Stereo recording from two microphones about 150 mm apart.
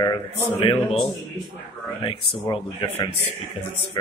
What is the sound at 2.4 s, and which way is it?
Speech, 25° left (ahead or behind).